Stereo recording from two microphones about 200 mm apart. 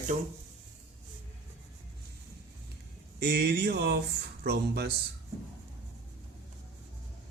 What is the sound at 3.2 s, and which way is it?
Speech, 55° right (ahead or behind).